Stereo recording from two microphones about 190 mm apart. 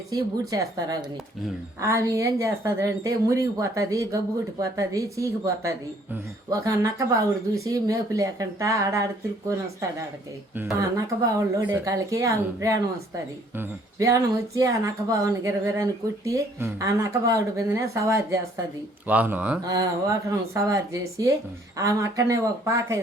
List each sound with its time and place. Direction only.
0.1 s speech: 20° right (ahead or behind)
10.5 s speech: 10° right (ahead or behind)
19.6 s speech: 15° right (ahead or behind)